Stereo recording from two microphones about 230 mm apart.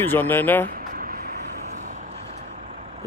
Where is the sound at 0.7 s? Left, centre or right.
Right.